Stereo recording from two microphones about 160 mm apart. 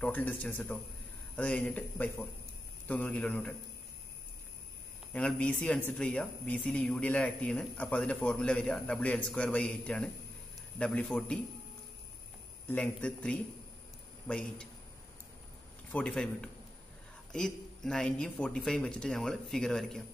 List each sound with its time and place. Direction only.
0.0 s speech: 10° left (ahead or behind)
5.1 s speech: 5° left (ahead or behind)
12.6 s speech: 10° left (ahead or behind)
15.9 s speech: 5° left (ahead or behind)